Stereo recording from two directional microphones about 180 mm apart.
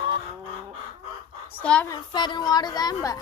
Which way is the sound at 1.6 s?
5° left (ahead or behind).